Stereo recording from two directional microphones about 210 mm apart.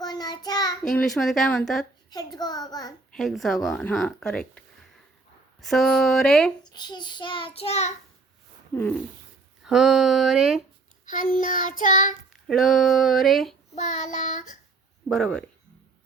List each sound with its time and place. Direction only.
0.0 s child singing: 20° left (ahead or behind)
0.8 s speech: 5° left (ahead or behind)
2.0 s a child's voice: 20° left (ahead or behind)
3.1 s speech: centre (ahead or behind)
6.7 s a child's voice: 20° left (ahead or behind)
8.7 s a sound: 10° left (ahead or behind)
9.6 s speech: centre (ahead or behind)
11.0 s child singing: 40° left (ahead or behind)
12.5 s speech: centre (ahead or behind)
13.7 s child singing: 35° left (ahead or behind)
15.1 s speech: 5° left (ahead or behind)